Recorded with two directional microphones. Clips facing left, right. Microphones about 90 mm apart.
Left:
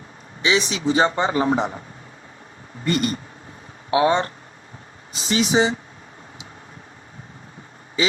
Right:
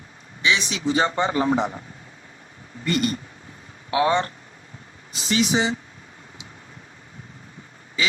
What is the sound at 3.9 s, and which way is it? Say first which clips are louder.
Speech: left 2 dB; 25° left (ahead or behind).